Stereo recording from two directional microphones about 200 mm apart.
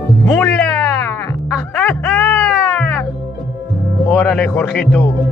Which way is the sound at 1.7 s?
5° left (ahead or behind).